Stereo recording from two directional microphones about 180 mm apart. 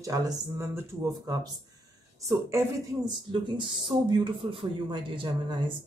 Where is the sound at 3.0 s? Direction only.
25° right (ahead or behind).